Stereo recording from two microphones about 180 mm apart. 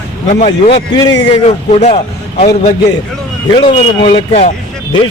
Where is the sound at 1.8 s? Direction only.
40° left (ahead or behind).